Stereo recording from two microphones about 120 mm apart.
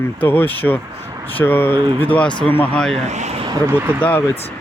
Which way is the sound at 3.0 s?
75° right (ahead or behind).